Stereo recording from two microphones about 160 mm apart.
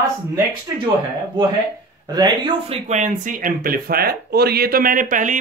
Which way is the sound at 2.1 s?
25° right (ahead or behind).